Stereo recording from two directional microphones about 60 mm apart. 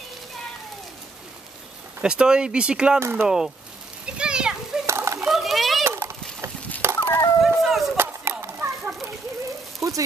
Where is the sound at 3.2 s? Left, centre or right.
Centre.